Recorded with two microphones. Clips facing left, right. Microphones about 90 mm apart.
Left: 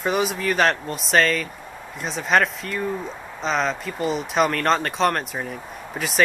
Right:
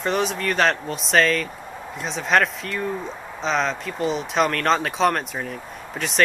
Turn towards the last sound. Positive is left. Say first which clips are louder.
# even
turn(degrees=5)  # may be behind; listen again after turning